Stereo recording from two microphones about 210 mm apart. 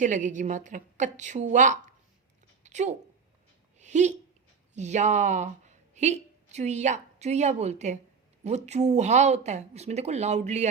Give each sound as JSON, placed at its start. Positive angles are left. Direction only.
{"t": 0.0, "sound": "a woman's voice", "side_deg": -35}
{"t": 2.6, "sound": "a sound", "side_deg": -35}
{"t": 4.7, "sound": "a woman's voice", "side_deg": -35}